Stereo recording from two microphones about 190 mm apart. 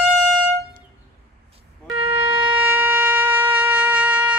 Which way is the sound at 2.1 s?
10° right (ahead or behind).